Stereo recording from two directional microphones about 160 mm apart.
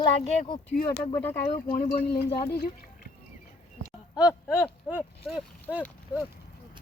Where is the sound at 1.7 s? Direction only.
80° left.